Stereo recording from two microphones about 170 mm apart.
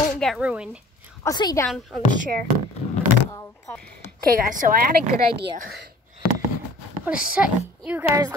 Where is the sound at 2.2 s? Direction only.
60° right (ahead or behind).